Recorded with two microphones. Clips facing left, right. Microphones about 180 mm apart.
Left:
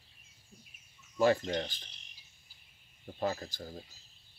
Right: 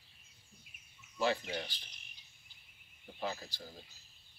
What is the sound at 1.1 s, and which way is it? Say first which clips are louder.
Cricket: left 7 dB; 45° left (ahead or behind).